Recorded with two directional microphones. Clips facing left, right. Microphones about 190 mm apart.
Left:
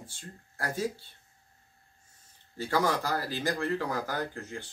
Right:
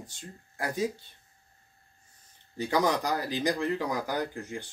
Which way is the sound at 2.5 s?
15° right (ahead or behind).